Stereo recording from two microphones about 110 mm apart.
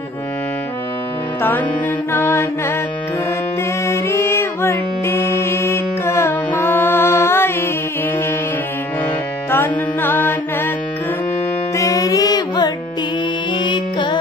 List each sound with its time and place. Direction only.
1.4 s music: 20° left (ahead or behind)
2.1 s mantra: 20° left (ahead or behind)
3.8 s music: 25° left (ahead or behind)
9.5 s music: 20° left (ahead or behind)
11.7 s music: 30° left (ahead or behind)